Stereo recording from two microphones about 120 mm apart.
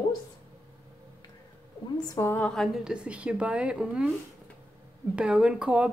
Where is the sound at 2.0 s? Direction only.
25° left (ahead or behind).